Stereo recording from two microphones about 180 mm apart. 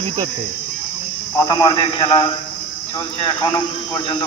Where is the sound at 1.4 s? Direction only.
20° left (ahead or behind).